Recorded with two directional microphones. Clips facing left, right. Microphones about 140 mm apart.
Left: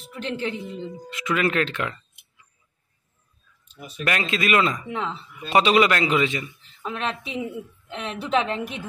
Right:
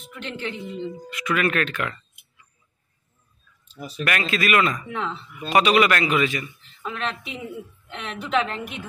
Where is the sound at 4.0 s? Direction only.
25° left (ahead or behind).